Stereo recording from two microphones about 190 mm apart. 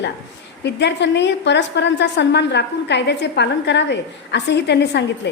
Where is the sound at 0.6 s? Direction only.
65° left (ahead or behind).